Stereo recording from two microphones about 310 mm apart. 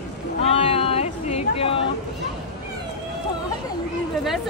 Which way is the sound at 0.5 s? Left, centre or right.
Centre.